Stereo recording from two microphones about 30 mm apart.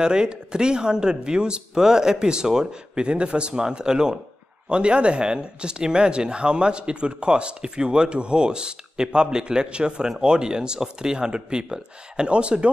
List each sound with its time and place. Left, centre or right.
0.0 s speech: right
2.9 s speech: right
3.6 s speech: right